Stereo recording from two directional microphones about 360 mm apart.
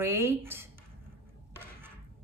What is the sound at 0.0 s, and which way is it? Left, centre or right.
Speech, centre.